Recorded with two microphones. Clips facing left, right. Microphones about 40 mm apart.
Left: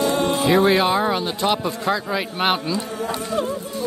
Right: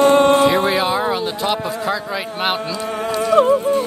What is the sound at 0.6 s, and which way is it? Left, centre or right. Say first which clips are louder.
A man's voice: even; centre.